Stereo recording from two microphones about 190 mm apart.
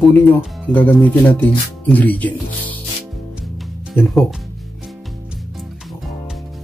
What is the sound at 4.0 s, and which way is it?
Speech, 10° left (ahead or behind).